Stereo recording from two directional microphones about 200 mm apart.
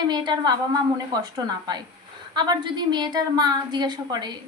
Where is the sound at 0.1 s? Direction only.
20° right (ahead or behind).